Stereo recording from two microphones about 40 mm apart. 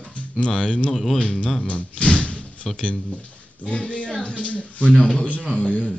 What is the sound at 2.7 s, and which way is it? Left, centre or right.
Speech, left.